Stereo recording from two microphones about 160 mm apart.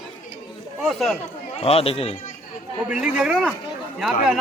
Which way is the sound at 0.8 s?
Centre (ahead or behind).